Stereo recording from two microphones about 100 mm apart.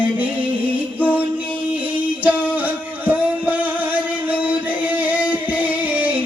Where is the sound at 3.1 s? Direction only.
15° right (ahead or behind).